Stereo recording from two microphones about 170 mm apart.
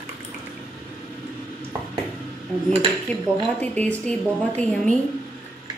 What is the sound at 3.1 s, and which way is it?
Speech, 10° left (ahead or behind).